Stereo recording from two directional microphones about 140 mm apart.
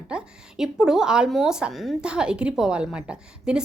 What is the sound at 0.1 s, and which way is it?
A woman's voice, 5° right (ahead or behind).